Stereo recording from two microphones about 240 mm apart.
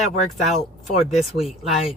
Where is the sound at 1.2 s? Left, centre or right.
Centre.